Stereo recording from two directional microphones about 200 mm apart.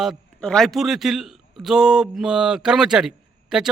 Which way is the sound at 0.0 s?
Centre (ahead or behind).